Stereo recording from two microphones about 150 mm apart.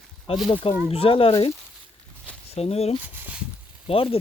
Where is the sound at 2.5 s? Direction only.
45° left (ahead or behind).